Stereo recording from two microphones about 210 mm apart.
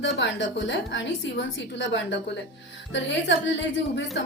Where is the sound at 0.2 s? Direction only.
60° left (ahead or behind).